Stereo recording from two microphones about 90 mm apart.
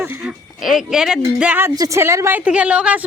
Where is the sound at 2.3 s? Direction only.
15° right (ahead or behind).